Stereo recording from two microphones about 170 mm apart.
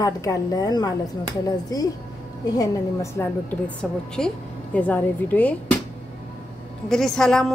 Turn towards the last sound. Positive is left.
turn(degrees=5)  # may be behind; listen again after turning